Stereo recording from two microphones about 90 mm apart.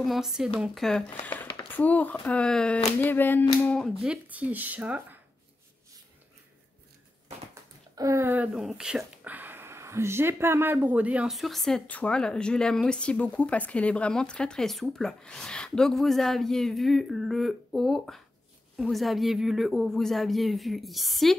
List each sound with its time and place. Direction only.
0.0 s a woman's voice: 5° right (ahead or behind)
1.2 s speech: 20° left (ahead or behind)
3.0 s a sound: 20° left (ahead or behind)
4.0 s speech: 15° right (ahead or behind)
7.9 s a sound: 45° right (ahead or behind)
8.2 s speech: 20° right (ahead or behind)
8.5 s a woman's voice: 5° right (ahead or behind)
9.2 s a sound: 20° right (ahead or behind)
10.9 s speech: 15° right (ahead or behind)
11.2 s a woman's voice: centre (ahead or behind)